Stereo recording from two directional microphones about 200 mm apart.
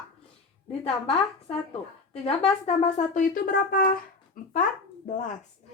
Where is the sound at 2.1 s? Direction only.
30° left (ahead or behind); by 3.9 s 45° left (ahead or behind).